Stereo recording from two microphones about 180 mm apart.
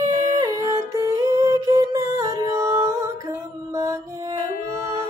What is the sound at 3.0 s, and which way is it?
Mantra, 15° right (ahead or behind).